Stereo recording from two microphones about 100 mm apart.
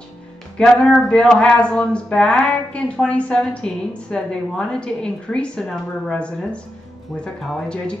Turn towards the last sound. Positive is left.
turn(degrees=5)  # may be behind; listen again after turning